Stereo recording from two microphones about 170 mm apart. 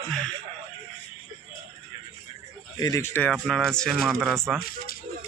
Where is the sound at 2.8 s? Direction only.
20° left (ahead or behind).